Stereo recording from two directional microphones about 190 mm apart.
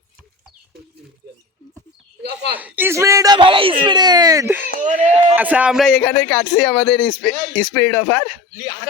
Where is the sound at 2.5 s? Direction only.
10° right (ahead or behind).